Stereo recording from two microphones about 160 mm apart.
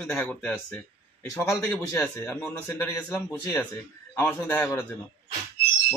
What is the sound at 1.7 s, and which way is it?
Speech, 15° left (ahead or behind).